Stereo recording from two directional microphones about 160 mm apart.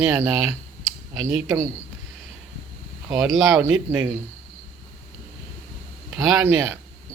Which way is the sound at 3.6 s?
10° right (ahead or behind).